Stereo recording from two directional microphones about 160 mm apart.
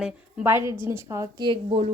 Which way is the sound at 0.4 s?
15° right (ahead or behind).